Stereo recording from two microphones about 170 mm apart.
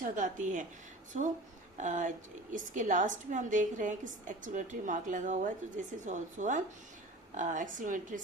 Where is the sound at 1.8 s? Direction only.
50° right (ahead or behind).